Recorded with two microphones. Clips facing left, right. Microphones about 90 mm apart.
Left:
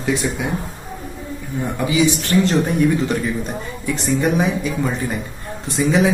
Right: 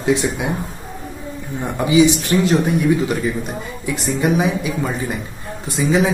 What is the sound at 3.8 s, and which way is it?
A man's voice, 5° right (ahead or behind).